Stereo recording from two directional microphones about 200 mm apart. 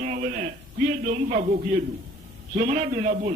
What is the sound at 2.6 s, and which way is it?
Speech, 35° right (ahead or behind).